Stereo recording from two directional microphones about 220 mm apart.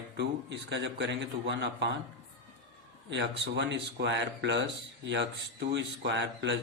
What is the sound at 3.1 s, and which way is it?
Speech, 50° right (ahead or behind).